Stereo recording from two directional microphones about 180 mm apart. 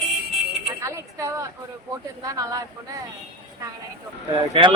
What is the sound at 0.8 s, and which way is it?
A woman's voice, 15° right (ahead or behind).